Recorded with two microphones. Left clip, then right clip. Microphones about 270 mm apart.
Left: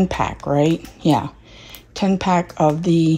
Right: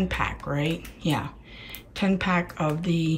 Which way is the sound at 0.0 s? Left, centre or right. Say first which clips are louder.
Left 7 dB; centre.